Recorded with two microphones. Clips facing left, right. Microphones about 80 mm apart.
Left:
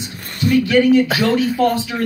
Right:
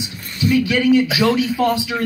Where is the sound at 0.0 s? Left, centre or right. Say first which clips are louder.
Left 1 dB; left.